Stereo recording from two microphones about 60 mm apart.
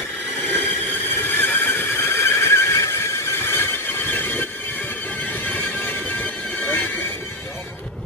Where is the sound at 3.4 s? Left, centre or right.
Left.